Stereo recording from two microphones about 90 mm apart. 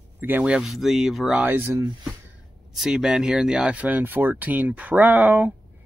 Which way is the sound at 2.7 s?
5° right (ahead or behind).